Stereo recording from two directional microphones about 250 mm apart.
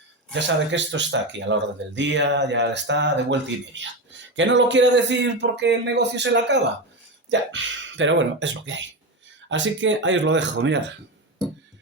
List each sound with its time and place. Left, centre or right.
0.3 s speech: right
4.4 s speech: right